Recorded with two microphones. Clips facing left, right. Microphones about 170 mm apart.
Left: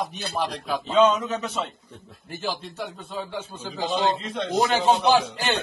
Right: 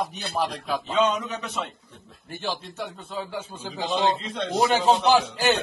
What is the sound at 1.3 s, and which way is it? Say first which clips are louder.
Speech: left 3 dB; 30° left (ahead or behind).